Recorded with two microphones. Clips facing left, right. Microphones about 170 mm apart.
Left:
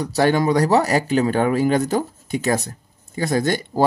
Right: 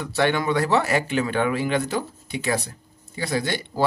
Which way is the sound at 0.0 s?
40° left (ahead or behind).